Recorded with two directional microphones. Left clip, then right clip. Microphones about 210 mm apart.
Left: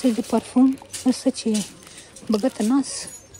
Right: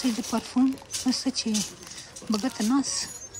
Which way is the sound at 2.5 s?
5° right (ahead or behind).